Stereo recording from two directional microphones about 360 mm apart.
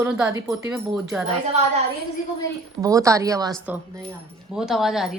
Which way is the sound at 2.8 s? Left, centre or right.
Centre.